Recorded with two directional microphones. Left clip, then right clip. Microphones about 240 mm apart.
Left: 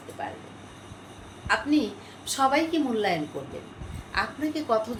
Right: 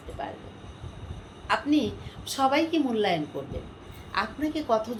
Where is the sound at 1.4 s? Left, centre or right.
Centre.